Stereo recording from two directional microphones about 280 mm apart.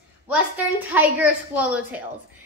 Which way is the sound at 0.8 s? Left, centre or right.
Centre.